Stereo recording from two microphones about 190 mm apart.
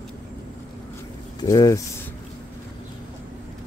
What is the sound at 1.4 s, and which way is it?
Speech, 20° left (ahead or behind).